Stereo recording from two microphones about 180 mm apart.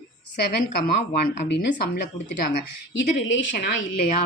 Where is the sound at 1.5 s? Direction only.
65° left (ahead or behind).